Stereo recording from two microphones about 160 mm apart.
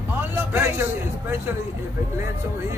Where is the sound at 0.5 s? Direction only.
15° right (ahead or behind).